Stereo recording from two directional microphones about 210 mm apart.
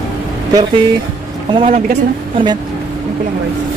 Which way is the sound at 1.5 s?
25° right (ahead or behind).